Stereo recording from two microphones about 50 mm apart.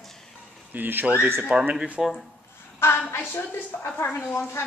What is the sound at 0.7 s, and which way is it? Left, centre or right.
Speech, right.